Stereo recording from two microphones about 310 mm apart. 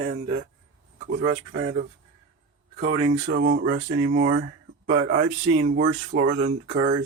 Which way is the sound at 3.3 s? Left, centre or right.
Right.